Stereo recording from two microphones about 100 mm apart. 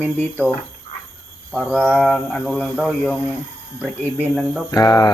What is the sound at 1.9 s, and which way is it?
Mantra, centre (ahead or behind).